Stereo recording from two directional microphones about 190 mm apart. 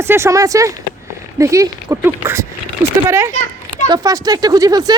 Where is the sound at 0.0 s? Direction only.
15° right (ahead or behind).